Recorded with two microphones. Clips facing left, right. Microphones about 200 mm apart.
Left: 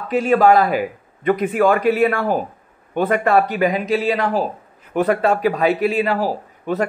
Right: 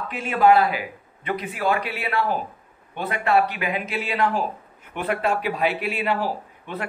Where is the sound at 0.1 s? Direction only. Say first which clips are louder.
Left 5 dB; 40° left (ahead or behind).